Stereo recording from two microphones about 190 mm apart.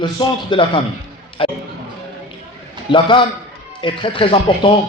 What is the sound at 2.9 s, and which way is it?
A man's voice, 25° left (ahead or behind).